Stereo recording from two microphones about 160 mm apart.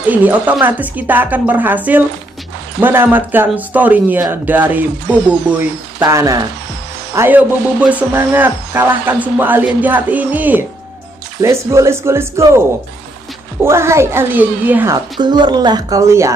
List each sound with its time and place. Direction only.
0.1 s speech: 10° right (ahead or behind)
15.1 s speech: 30° right (ahead or behind)